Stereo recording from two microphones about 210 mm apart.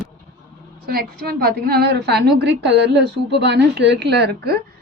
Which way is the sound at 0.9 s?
45° right (ahead or behind).